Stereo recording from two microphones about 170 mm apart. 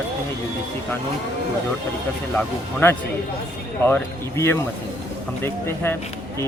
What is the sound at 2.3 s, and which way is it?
Speech, 15° left (ahead or behind).